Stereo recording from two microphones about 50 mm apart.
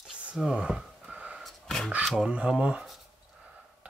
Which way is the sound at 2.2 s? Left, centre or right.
Right.